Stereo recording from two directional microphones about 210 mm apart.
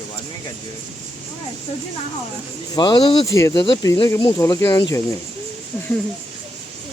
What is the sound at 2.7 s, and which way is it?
Speech, 20° left (ahead or behind).